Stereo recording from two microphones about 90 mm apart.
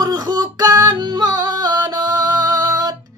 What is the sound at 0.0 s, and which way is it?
Music, 50° right (ahead or behind).